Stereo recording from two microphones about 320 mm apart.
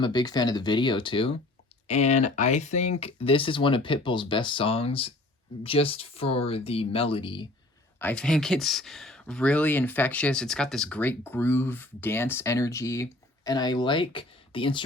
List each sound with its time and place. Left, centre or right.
0.0 s speech: centre
7.9 s speech: centre